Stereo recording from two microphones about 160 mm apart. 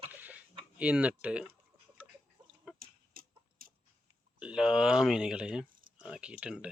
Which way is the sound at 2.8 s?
65° right (ahead or behind).